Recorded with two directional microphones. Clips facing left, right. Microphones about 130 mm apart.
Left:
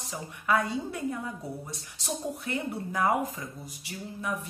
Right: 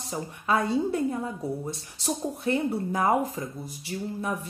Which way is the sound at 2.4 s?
30° right (ahead or behind).